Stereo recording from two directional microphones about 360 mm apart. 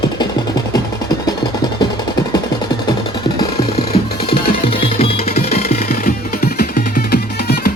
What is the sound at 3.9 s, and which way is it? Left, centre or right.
Music, left.